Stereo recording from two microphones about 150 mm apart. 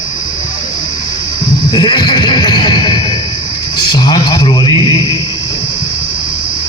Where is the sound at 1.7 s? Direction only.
30° left (ahead or behind).